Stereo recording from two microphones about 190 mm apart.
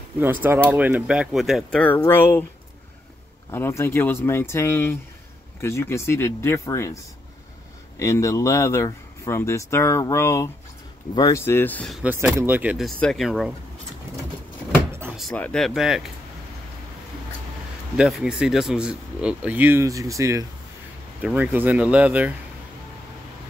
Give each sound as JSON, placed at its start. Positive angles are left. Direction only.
{"t": 0.2, "sound": "speech", "side_deg": -10}
{"t": 3.5, "sound": "speech", "side_deg": 10}
{"t": 8.0, "sound": "speech", "side_deg": 15}
{"t": 12.0, "sound": "speech", "side_deg": -10}
{"t": 14.9, "sound": "door", "side_deg": -10}
{"t": 15.1, "sound": "speech", "side_deg": 5}
{"t": 17.9, "sound": "speech", "side_deg": -5}